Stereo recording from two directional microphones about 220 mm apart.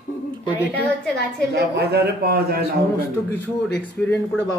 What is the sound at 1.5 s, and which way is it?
A man's voice, 50° right (ahead or behind).